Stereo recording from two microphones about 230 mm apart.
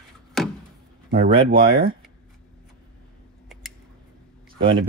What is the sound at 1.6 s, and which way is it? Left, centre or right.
Speech, right.